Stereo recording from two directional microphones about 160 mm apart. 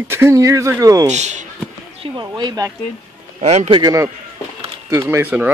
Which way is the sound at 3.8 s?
20° right (ahead or behind).